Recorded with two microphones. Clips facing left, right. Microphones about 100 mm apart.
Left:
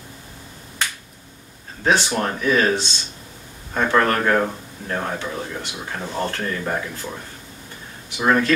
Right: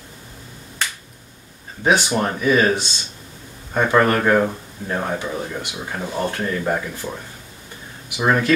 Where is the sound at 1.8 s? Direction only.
15° right (ahead or behind).